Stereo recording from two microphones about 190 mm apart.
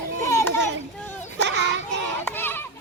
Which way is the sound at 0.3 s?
15° left (ahead or behind).